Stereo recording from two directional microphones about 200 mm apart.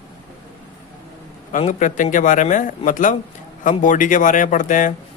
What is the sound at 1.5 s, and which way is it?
A man's voice, 40° left (ahead or behind).